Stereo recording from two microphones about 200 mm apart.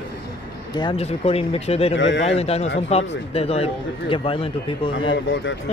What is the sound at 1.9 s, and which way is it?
Speech, 65° left (ahead or behind).